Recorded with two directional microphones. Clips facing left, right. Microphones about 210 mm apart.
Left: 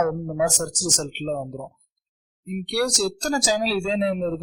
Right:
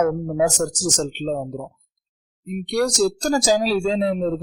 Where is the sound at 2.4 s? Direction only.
40° right (ahead or behind).